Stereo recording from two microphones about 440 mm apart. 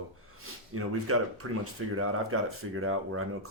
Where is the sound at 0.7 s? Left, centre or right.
Right.